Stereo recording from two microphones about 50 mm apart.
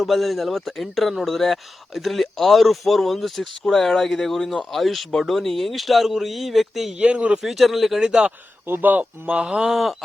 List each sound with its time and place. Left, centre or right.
0.0 s speech: centre
7.0 s speech: right
7.4 s speech: centre
8.6 s speech: right
9.3 s speech: centre
9.6 s speech: centre